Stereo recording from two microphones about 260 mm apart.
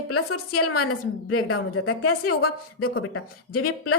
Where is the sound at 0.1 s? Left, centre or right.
Left.